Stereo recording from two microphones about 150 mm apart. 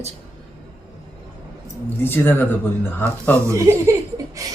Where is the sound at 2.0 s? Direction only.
15° left (ahead or behind).